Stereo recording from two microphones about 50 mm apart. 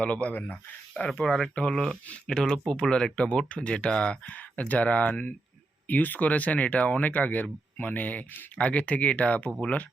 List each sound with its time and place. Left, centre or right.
0.0 s speech: left